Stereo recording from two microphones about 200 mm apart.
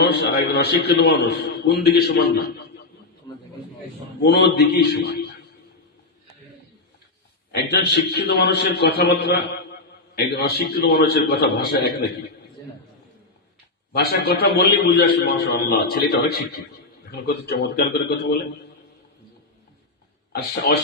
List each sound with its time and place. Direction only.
0.0 s a man's voice: 55° left (ahead or behind)
4.3 s a man's voice: 55° left (ahead or behind)
7.5 s a man's voice: 55° left (ahead or behind)
13.9 s a man's voice: 55° left (ahead or behind)